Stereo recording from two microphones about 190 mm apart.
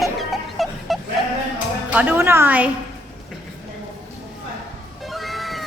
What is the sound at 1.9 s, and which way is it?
Speech, 10° right (ahead or behind).